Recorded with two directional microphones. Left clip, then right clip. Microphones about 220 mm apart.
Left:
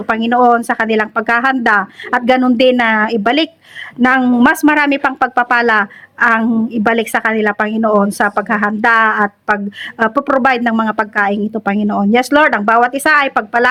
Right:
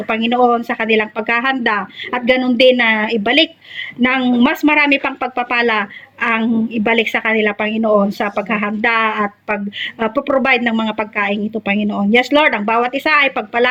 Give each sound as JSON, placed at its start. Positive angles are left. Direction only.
{"t": 0.2, "sound": "speech", "side_deg": 35}